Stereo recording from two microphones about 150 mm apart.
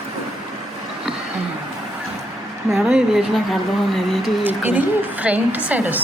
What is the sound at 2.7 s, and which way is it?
Speech, 5° right (ahead or behind).